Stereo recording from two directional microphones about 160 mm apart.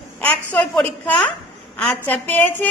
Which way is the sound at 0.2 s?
10° left (ahead or behind).